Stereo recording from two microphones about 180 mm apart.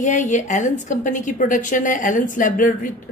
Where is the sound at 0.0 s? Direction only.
45° left (ahead or behind).